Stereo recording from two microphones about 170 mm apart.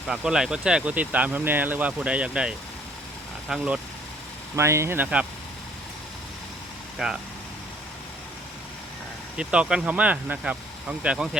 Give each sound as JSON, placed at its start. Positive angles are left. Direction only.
{"t": 0.1, "sound": "speech", "side_deg": -5}
{"t": 4.5, "sound": "speech", "side_deg": -15}
{"t": 7.0, "sound": "speech", "side_deg": -5}
{"t": 9.4, "sound": "speech", "side_deg": -5}